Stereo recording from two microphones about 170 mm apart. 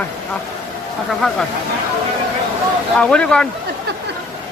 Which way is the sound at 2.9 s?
5° left (ahead or behind).